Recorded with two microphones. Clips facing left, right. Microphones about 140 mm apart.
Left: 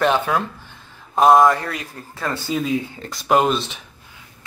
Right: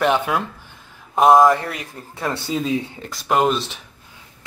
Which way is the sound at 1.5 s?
20° right (ahead or behind).